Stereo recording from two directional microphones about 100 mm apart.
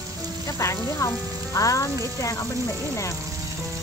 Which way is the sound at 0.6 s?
30° left (ahead or behind).